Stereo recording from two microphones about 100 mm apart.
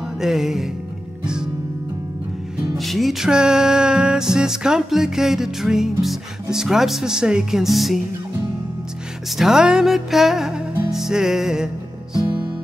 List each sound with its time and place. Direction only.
0.2 s music: 5° right (ahead or behind)
2.8 s music: centre (ahead or behind)
9.4 s music: 5° right (ahead or behind)